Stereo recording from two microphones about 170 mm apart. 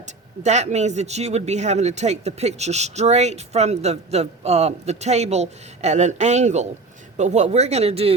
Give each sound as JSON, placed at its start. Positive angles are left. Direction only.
{"t": 0.0, "sound": "speech", "side_deg": -45}